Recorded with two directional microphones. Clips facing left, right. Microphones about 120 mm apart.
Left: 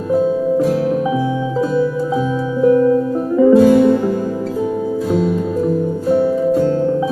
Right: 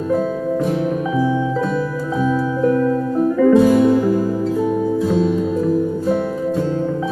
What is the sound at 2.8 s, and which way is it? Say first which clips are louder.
Music: left 3 dB; 20° left (ahead or behind).